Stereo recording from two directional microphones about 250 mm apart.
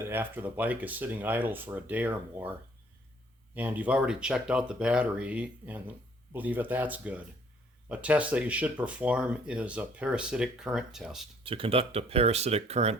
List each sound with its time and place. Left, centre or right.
0.0 s speech: centre
11.4 s speech: right